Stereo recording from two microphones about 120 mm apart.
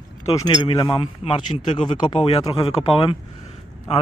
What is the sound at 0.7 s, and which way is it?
Speech, 45° left (ahead or behind).